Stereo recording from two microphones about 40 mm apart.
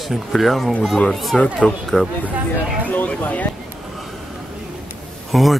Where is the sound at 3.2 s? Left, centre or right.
Left.